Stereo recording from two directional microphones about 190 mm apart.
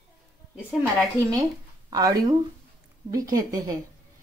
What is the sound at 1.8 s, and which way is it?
Speech, 20° right (ahead or behind).